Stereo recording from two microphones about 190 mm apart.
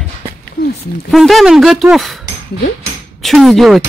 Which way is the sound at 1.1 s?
Centre (ahead or behind).